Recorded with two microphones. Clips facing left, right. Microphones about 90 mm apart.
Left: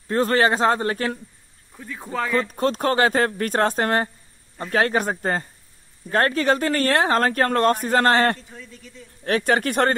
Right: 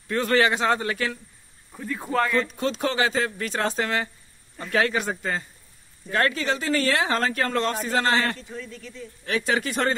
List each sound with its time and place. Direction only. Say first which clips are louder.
0.1 s a man's voice: left 2 dB; 35° left (ahead or behind)
1.8 s speech: right 3 dB; centre (ahead or behind)
2.5 s speech: left 5 dB; 45° left (ahead or behind)